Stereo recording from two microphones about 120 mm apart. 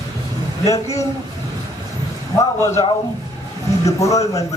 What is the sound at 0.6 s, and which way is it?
Speech, 30° left (ahead or behind).